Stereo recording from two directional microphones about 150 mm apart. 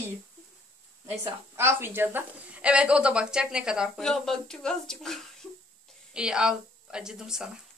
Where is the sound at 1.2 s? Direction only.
15° right (ahead or behind).